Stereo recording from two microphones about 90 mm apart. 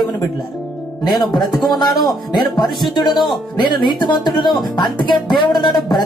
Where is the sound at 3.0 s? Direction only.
Centre (ahead or behind).